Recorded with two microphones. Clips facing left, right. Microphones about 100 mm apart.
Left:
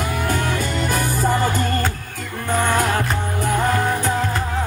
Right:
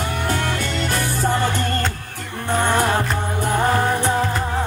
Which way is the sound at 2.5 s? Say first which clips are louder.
Right 1 dB; 20° right (ahead or behind).